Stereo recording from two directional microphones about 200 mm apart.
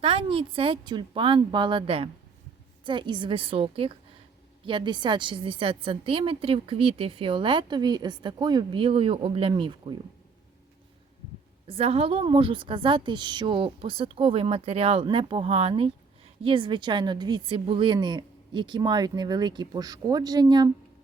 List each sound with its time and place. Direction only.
0.0 s a woman's voice: 25° right (ahead or behind)
11.7 s a woman's voice: 30° right (ahead or behind)